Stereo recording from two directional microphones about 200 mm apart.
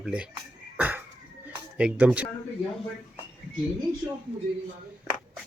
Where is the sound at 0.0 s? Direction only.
5° right (ahead or behind).